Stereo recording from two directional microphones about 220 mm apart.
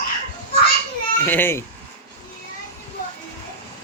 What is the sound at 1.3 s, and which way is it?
Speech, 10° left (ahead or behind).